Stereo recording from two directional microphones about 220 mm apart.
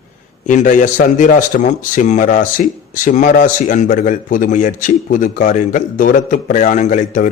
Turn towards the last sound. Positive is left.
turn(degrees=35)  # may be behind; listen again after turning